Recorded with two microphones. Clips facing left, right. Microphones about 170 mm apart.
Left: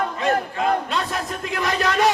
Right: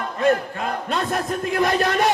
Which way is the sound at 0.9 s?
50° right (ahead or behind).